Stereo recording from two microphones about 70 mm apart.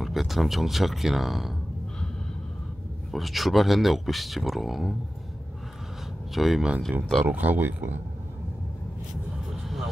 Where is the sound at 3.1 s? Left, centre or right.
Centre.